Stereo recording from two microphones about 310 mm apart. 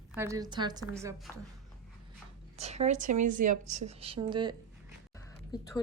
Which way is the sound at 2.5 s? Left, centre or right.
Right.